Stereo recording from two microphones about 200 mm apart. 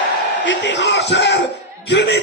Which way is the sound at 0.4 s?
65° left (ahead or behind).